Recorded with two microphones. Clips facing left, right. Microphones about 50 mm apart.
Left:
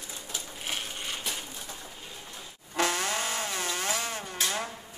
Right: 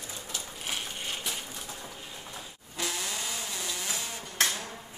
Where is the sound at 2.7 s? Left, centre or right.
Left.